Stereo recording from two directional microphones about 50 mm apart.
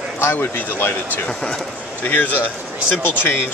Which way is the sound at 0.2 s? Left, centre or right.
Left.